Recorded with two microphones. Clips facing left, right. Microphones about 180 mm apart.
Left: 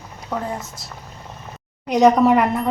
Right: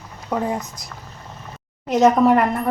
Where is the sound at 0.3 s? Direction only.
15° right (ahead or behind).